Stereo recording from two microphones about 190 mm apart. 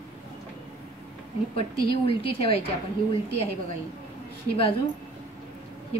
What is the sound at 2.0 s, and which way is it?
Speech, 30° left (ahead or behind).